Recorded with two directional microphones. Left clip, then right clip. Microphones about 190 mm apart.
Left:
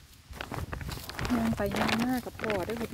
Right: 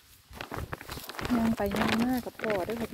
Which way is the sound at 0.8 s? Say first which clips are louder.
Even; 20° right (ahead or behind).